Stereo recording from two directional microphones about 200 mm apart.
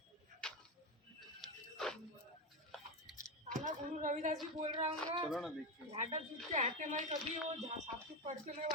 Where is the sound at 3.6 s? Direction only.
40° right (ahead or behind).